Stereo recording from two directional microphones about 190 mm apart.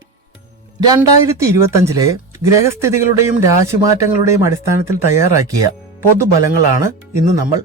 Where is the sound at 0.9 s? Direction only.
15° right (ahead or behind).